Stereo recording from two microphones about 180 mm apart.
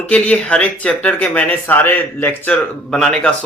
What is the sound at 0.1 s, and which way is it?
Speech, 5° left (ahead or behind).